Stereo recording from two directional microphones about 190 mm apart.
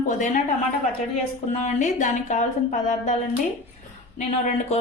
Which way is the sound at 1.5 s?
40° left (ahead or behind).